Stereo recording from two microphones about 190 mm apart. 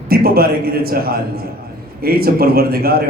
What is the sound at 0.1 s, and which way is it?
A man's voice, 55° right (ahead or behind).